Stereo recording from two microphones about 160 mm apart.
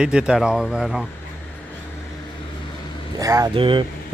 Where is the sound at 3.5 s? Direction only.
30° right (ahead or behind).